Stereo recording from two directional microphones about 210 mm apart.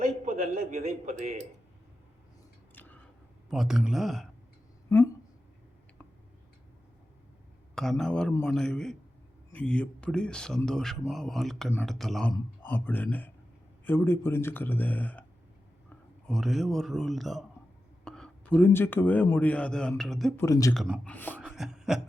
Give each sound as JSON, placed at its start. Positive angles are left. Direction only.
{"t": 0.3, "sound": "a man's voice", "side_deg": -30}
{"t": 3.5, "sound": "speech", "side_deg": 0}
{"t": 4.9, "sound": "a woman's voice", "side_deg": 15}
{"t": 7.8, "sound": "speech", "side_deg": 5}
{"t": 16.2, "sound": "a man's voice", "side_deg": 0}
{"t": 20.4, "sound": "speech", "side_deg": 15}
{"t": 20.7, "sound": "speech", "side_deg": 0}
{"t": 21.4, "sound": "beatboxing", "side_deg": 0}